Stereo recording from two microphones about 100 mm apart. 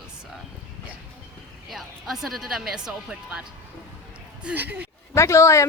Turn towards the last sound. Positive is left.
turn(degrees=30)  # may be behind; listen again after turning